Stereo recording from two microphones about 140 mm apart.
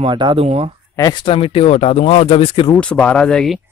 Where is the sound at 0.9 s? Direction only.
25° left (ahead or behind).